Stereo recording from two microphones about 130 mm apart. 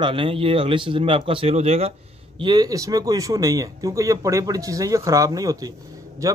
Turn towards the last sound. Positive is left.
turn(degrees=-25)  # may be behind; listen again after turning